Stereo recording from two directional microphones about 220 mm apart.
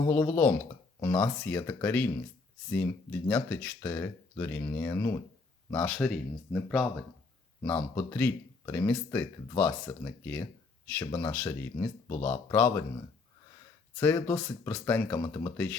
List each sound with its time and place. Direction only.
0.1 s speech: 10° left (ahead or behind)
14.0 s speech: 10° left (ahead or behind)